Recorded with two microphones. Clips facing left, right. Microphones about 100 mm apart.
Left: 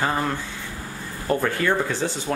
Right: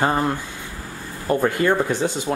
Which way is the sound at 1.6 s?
15° right (ahead or behind).